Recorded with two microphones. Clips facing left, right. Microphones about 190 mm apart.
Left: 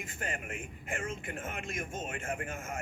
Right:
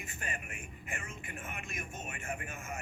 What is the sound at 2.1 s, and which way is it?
Speech, 50° left (ahead or behind).